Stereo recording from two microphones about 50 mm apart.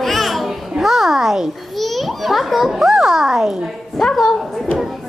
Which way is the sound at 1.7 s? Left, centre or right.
Centre.